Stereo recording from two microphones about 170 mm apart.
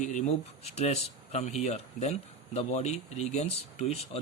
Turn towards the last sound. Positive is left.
turn(degrees=40)  # may be behind; listen again after turning